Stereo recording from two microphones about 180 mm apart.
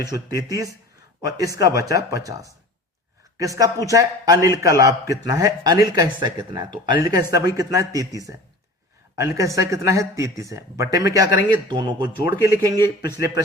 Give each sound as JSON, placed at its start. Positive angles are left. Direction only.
{"t": 0.0, "sound": "speech", "side_deg": -20}